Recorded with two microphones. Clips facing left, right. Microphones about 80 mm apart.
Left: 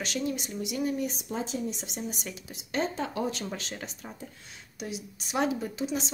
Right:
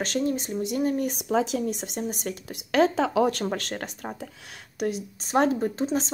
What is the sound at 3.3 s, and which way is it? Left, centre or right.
Speech, right.